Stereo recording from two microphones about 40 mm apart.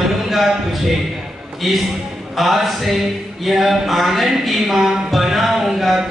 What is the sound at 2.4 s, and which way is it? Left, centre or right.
Speech, centre.